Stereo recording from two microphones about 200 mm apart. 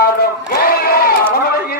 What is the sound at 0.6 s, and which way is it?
Crowd, 50° left (ahead or behind).